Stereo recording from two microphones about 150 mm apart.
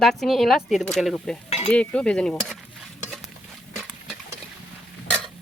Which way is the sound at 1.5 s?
40° left (ahead or behind).